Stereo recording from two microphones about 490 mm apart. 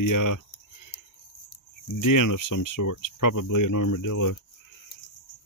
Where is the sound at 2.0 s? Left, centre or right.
Left.